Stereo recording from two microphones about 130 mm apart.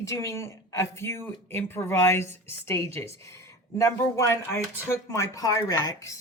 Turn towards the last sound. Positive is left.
turn(degrees=25)  # may be behind; listen again after turning